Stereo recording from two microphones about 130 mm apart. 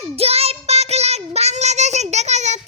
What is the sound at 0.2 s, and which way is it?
Child singing, 50° right (ahead or behind).